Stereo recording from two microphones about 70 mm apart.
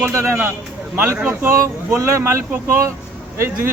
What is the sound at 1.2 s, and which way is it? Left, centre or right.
Speech, right.